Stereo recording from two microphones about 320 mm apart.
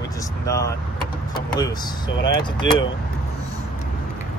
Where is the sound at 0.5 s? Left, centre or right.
Centre.